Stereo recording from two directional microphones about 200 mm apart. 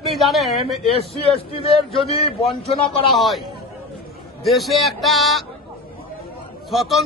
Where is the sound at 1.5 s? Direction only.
30° left (ahead or behind).